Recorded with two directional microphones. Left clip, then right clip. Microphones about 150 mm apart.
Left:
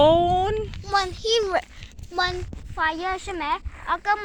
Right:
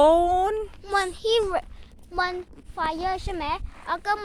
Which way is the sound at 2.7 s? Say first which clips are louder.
Left 2 dB; centre (ahead or behind).